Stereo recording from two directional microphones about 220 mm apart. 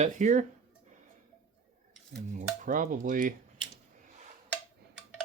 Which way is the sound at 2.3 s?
35° right (ahead or behind).